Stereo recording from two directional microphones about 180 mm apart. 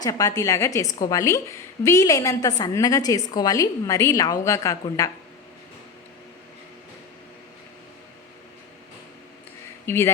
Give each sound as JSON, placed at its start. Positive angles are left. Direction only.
{"t": 0.0, "sound": "a woman's voice", "side_deg": 20}
{"t": 9.8, "sound": "speech", "side_deg": 15}